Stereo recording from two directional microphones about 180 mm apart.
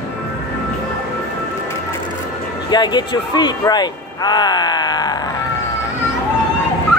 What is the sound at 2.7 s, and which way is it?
Speech, 25° left (ahead or behind).